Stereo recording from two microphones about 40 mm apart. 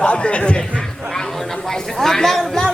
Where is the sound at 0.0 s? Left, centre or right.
Left.